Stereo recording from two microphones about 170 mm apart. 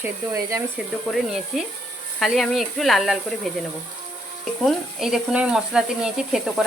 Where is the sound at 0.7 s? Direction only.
Centre (ahead or behind).